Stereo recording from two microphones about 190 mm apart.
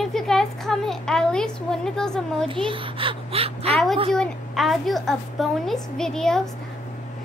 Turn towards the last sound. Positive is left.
turn(degrees=5)  # may be behind; listen again after turning